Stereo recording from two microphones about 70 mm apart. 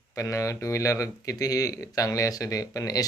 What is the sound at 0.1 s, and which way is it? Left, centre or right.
Speech, left.